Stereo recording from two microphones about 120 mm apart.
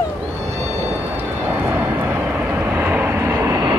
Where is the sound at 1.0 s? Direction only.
15° right (ahead or behind).